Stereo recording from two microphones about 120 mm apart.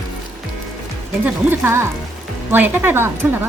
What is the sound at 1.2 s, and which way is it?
A woman's voice, 20° right (ahead or behind).